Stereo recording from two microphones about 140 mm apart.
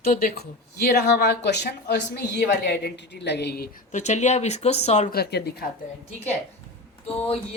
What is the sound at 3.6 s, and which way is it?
Speech, 70° left (ahead or behind).